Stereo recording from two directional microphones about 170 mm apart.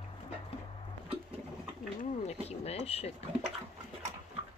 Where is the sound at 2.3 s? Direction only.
35° left (ahead or behind).